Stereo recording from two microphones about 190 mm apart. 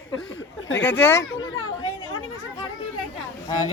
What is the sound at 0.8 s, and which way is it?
Speech, 10° left (ahead or behind).